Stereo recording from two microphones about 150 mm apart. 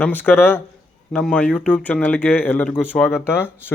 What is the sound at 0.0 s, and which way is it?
A man's voice, 10° left (ahead or behind).